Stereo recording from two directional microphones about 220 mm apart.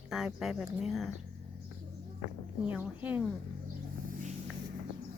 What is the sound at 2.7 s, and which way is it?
Speech, 5° right (ahead or behind).